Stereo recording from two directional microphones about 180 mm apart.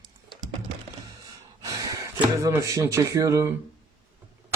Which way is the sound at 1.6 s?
20° right (ahead or behind).